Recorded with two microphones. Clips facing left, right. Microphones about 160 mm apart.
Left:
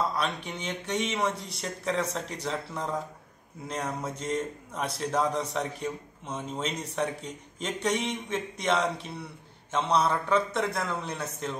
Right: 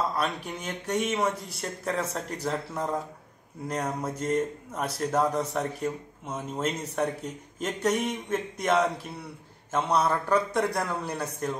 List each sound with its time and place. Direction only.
0.2 s a man's voice: centre (ahead or behind)